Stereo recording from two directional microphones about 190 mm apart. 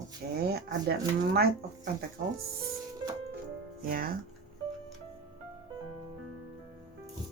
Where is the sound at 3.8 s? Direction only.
50° right (ahead or behind).